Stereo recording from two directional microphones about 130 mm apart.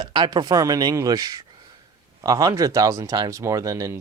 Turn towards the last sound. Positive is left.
turn(degrees=-25)  # may be behind; listen again after turning